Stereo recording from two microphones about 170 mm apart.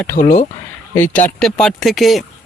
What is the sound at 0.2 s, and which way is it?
Speech, 55° left (ahead or behind).